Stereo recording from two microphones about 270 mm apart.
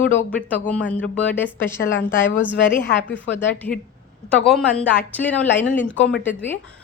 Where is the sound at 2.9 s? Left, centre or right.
Left.